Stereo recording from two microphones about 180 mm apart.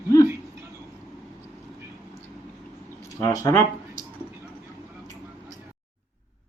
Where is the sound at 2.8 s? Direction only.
15° left (ahead or behind).